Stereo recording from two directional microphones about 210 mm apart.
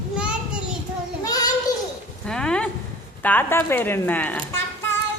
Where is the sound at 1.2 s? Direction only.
15° left (ahead or behind).